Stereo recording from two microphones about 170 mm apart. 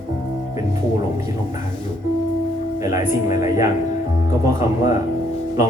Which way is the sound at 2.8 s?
20° right (ahead or behind).